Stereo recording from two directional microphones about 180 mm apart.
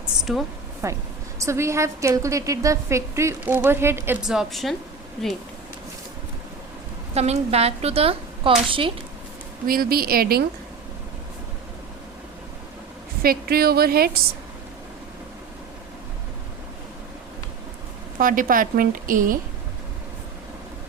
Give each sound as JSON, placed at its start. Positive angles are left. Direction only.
{"t": 0.3, "sound": "a woman's voice", "side_deg": 0}
{"t": 0.8, "sound": "a woman's voice", "side_deg": -15}
{"t": 7.1, "sound": "speech", "side_deg": -35}
{"t": 9.6, "sound": "a woman's voice", "side_deg": -55}
{"t": 13.2, "sound": "a woman's voice", "side_deg": -55}
{"t": 18.2, "sound": "a woman's voice", "side_deg": -50}